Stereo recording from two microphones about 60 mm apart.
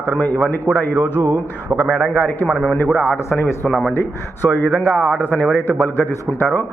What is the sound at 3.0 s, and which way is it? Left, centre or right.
Speech, left.